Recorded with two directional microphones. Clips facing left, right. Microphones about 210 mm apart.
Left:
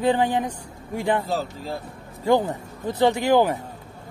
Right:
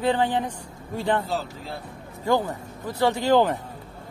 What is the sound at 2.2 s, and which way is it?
A man's voice, 20° left (ahead or behind).